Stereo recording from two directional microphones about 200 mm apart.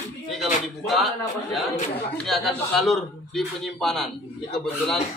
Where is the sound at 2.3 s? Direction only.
Centre (ahead or behind).